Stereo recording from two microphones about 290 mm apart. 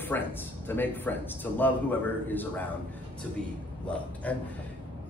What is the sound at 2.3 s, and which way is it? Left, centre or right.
Speech, centre.